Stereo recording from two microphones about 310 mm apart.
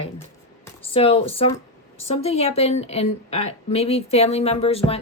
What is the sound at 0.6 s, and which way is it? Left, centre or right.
A woman's voice, centre.